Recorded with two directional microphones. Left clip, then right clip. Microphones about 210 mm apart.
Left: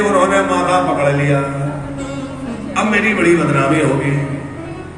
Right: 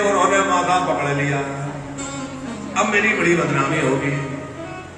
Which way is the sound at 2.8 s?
55° left (ahead or behind).